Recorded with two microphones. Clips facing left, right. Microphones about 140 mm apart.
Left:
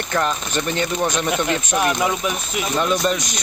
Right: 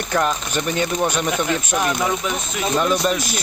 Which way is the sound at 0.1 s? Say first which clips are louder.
Right 1 dB; 5° right (ahead or behind).